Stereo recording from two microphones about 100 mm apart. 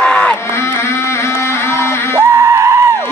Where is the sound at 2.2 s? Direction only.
25° right (ahead or behind).